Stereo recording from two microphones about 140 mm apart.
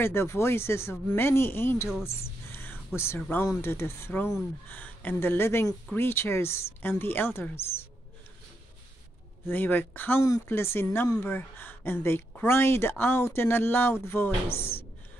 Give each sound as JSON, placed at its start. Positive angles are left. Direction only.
{"t": 0.0, "sound": "speech", "side_deg": 15}
{"t": 2.5, "sound": "a sound", "side_deg": 15}
{"t": 3.4, "sound": "speech", "side_deg": 15}
{"t": 9.5, "sound": "speech", "side_deg": 15}